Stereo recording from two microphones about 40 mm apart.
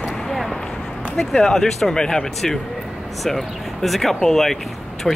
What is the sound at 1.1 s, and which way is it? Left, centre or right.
A woman's voice, centre.